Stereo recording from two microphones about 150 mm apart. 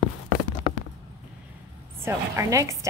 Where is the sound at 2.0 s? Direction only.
20° right (ahead or behind).